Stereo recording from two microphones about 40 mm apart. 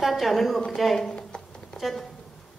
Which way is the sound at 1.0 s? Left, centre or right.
Centre.